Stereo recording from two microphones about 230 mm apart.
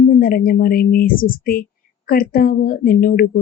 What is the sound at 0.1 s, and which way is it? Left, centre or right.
A woman's voice, left.